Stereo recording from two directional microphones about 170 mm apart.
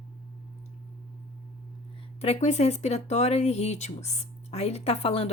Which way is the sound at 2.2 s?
40° left (ahead or behind).